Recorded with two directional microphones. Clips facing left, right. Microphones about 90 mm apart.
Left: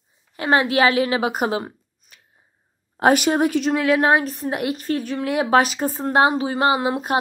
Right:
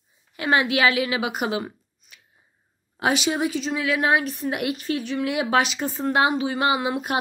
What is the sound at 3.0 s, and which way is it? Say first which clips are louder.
A woman's voice: left 6 dB; 50° left (ahead or behind).